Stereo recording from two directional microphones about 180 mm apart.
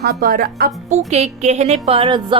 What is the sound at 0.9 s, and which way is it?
Speech, 40° right (ahead or behind).